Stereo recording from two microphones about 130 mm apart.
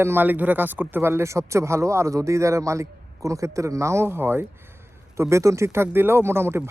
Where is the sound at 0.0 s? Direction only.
15° right (ahead or behind).